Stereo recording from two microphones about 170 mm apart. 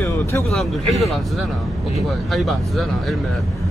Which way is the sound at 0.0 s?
15° left (ahead or behind).